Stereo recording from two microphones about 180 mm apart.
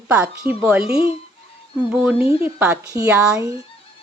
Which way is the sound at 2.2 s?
30° left (ahead or behind).